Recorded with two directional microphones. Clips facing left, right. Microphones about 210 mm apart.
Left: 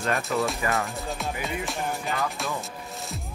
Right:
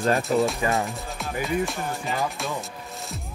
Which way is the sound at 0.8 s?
Centre (ahead or behind).